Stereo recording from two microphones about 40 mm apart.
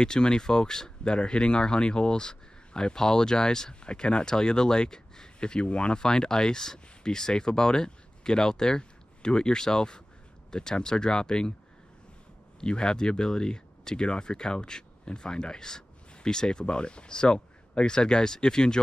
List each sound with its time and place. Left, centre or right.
0.0 s speech: centre
12.5 s speech: left